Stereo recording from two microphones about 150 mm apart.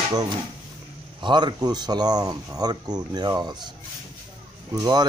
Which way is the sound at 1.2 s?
30° right (ahead or behind).